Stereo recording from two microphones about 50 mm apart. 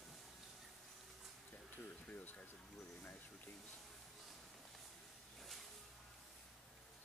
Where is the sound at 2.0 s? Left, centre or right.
Left.